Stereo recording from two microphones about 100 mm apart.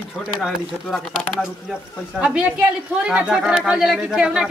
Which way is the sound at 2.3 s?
10° right (ahead or behind).